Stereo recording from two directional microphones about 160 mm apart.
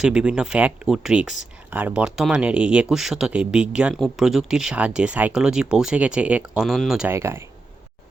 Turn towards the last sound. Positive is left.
turn(degrees=-15)  # may be behind; listen again after turning